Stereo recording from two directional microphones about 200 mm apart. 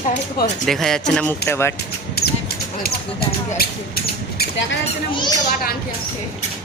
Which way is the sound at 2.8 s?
50° left (ahead or behind).